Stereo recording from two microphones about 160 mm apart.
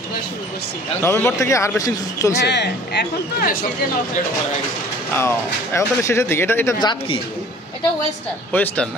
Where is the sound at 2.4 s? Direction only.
90° left; by 3.7 s 60° left (ahead or behind).